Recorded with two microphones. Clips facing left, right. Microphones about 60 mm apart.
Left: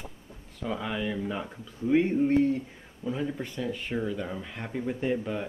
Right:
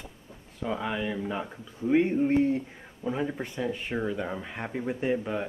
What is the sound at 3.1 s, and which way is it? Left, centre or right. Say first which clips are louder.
Speech: right 1 dB; right.